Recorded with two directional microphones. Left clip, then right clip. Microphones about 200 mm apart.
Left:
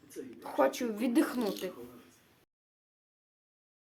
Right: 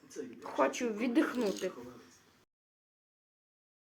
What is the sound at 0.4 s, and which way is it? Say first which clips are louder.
A woman's voice: left 2 dB; 25° left (ahead or behind).